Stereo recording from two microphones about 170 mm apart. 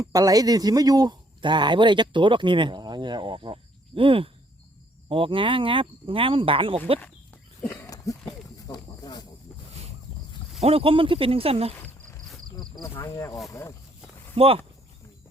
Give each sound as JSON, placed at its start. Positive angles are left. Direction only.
{"t": 0.0, "sound": "a man's voice", "side_deg": -20}
{"t": 7.7, "sound": "a sound", "side_deg": 20}
{"t": 8.6, "sound": "snake", "side_deg": 25}
{"t": 10.6, "sound": "speech", "side_deg": -35}
{"t": 12.9, "sound": "speech", "side_deg": 15}
{"t": 14.3, "sound": "speech", "side_deg": -35}